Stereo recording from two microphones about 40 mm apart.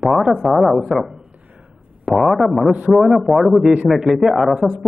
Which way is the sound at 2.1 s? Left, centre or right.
Centre.